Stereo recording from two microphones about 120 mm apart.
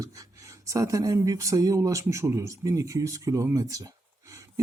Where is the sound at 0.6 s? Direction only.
25° right (ahead or behind).